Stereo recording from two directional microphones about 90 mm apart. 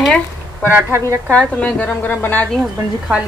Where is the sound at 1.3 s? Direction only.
15° left (ahead or behind).